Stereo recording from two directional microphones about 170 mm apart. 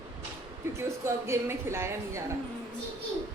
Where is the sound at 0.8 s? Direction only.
15° right (ahead or behind).